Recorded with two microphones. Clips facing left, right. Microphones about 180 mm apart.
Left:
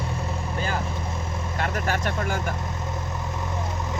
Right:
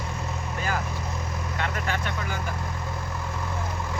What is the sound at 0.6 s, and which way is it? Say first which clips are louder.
Vehicle: left 1 dB; 30° left (ahead or behind).